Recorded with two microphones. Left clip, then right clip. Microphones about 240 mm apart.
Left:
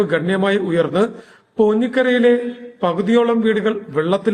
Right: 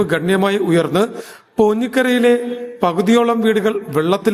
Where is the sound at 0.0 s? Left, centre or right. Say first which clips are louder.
Right 1 dB; right.